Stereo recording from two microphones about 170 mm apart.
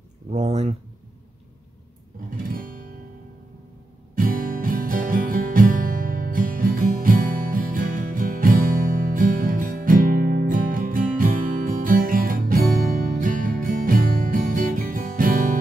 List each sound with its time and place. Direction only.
0.3 s speech: 40° right (ahead or behind)
2.4 s music: 55° right (ahead or behind)
4.2 s music: 55° right (ahead or behind)